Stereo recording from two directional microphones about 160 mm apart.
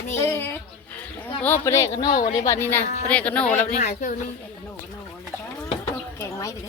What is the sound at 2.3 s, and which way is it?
Speech, 20° left (ahead or behind).